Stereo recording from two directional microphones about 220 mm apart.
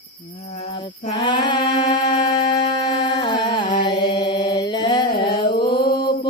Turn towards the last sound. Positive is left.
turn(degrees=20)  # may be behind; listen again after turning